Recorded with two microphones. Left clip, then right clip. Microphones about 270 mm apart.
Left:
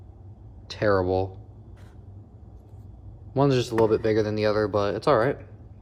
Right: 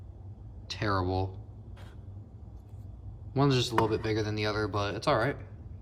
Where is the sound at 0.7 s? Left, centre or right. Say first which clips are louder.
Left 8 dB; centre.